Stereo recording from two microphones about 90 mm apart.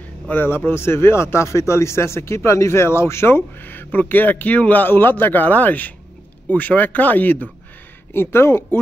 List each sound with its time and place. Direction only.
0.3 s speech: 20° left (ahead or behind)